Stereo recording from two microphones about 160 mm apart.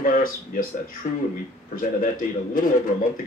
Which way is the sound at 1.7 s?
60° left (ahead or behind).